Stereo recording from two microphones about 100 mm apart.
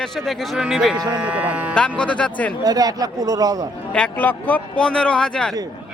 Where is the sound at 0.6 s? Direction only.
5° right (ahead or behind).